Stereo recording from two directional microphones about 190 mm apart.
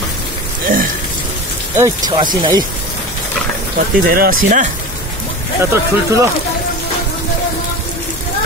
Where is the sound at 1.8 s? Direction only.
20° right (ahead or behind).